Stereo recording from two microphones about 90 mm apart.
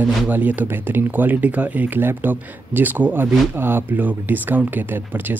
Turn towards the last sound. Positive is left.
turn(degrees=-20)  # may be behind; listen again after turning